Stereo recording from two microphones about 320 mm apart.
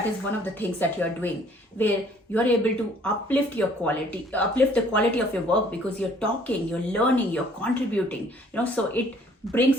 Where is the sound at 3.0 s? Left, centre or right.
Centre.